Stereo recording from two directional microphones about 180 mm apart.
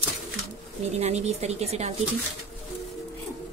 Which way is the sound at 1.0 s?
40° right (ahead or behind).